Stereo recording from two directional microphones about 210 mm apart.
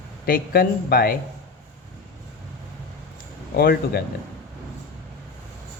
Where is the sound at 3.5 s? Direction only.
45° left (ahead or behind).